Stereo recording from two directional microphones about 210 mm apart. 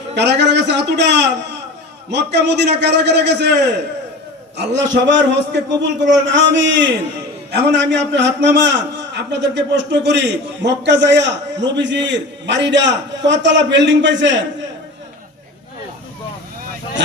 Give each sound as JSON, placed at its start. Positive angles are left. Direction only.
{"t": 0.1, "sound": "a man's voice", "side_deg": -55}